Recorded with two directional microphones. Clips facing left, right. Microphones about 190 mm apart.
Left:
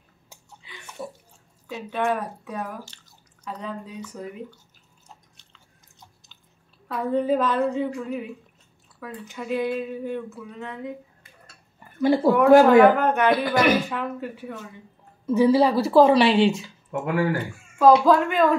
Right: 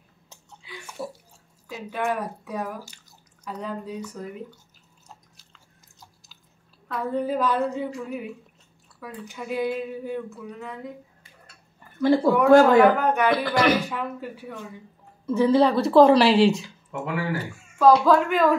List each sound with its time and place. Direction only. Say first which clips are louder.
0.7 s bathtub: right 2 dB; 5° right (ahead or behind)
1.7 s speech: left 2 dB; 5° right (ahead or behind)
6.9 s speech: left 3 dB; centre (ahead or behind)
9.3 s speech: left 1 dB; 5° right (ahead or behind)
12.0 s speech: even; 15° left (ahead or behind)
12.3 s speech: left 2 dB; 5° left (ahead or behind)
12.5 s speech: left 2 dB; 15° left (ahead or behind)
13.1 s speech: left 1 dB; centre (ahead or behind)
15.2 s speech: left 1 dB; 15° left (ahead or behind)
16.9 s speech: left 4 dB; 50° left (ahead or behind)
17.7 s speech: left 1 dB; centre (ahead or behind)